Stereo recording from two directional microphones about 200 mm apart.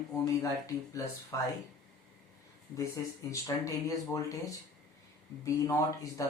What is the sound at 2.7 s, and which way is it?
Speech, 15° left (ahead or behind).